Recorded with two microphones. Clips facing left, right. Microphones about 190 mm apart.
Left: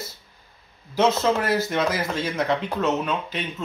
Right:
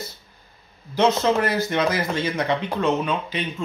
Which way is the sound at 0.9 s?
5° left (ahead or behind).